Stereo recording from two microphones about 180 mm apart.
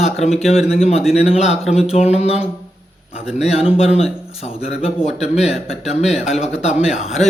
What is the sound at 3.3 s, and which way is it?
Speech, 35° left (ahead or behind).